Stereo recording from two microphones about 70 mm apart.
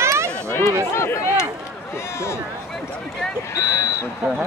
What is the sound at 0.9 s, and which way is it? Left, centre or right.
Speech, left.